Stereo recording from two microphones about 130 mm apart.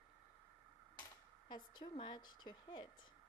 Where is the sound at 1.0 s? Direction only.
35° left (ahead or behind).